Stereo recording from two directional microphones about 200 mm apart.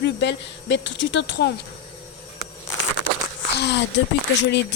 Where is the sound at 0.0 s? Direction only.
60° left (ahead or behind).